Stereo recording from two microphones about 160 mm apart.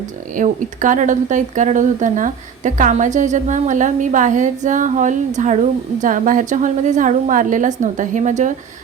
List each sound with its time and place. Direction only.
0.3 s speech: 55° right (ahead or behind)